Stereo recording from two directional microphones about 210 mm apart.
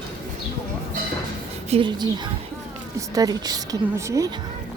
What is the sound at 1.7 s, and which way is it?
A woman's voice, 20° right (ahead or behind).